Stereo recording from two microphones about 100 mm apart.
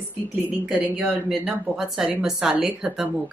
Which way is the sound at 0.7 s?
10° right (ahead or behind).